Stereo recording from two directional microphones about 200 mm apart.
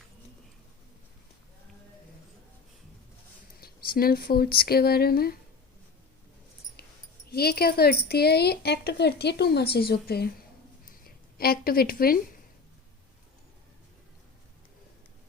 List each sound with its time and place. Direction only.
3.6 s speech: 50° left (ahead or behind)
7.3 s speech: 50° left (ahead or behind)
11.3 s speech: 50° left (ahead or behind)